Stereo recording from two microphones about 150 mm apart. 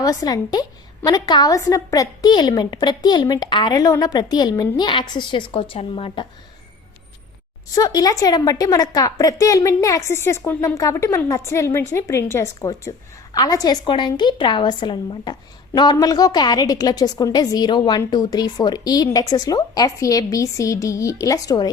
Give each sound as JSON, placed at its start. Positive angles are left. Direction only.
{"t": 0.0, "sound": "a woman's voice", "side_deg": 25}
{"t": 7.8, "sound": "a woman's voice", "side_deg": 25}